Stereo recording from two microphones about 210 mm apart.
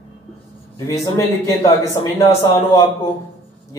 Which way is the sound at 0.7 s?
15° left (ahead or behind).